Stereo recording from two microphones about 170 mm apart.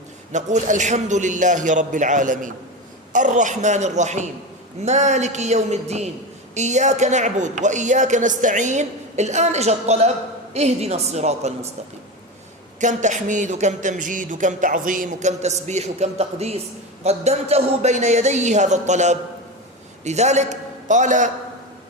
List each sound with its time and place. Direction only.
0.3 s a woman's voice: 45° right (ahead or behind)
12.8 s a man's voice: 45° right (ahead or behind)